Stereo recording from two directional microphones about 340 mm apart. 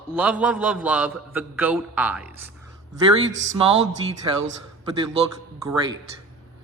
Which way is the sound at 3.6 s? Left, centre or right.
Centre.